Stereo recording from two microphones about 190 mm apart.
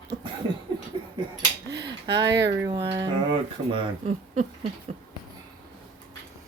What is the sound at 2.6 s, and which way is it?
Speech, 15° right (ahead or behind).